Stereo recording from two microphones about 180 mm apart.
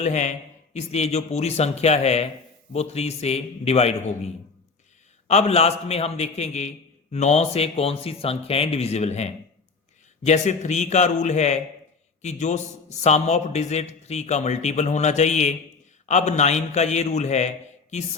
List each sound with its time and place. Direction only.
0.0 s a man's voice: 40° left (ahead or behind)
5.3 s a man's voice: 35° left (ahead or behind)